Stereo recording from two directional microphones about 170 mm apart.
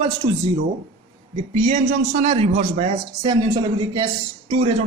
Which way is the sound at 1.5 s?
40° right (ahead or behind).